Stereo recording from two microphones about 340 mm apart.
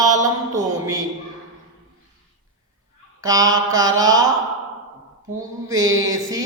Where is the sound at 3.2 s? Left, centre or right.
Centre.